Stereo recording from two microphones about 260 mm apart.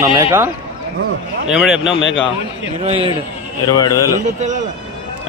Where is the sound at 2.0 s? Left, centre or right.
Left.